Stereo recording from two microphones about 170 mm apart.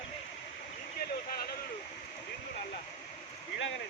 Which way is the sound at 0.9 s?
65° left (ahead or behind).